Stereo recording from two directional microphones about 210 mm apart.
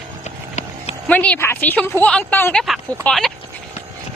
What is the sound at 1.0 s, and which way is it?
A woman's voice, 5° left (ahead or behind).